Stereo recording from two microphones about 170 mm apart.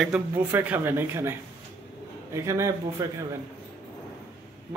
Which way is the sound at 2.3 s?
15° right (ahead or behind).